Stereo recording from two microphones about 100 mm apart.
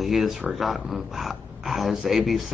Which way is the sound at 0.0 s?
Centre (ahead or behind).